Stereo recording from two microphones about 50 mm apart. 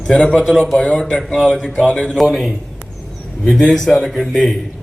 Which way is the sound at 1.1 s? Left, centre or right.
Centre.